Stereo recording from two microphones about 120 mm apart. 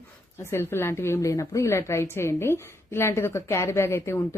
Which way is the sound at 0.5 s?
20° left (ahead or behind).